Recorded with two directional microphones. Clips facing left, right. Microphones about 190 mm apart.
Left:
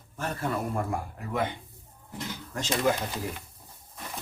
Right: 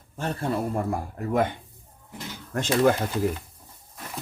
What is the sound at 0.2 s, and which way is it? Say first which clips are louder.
Speech: right 3 dB; 30° right (ahead or behind).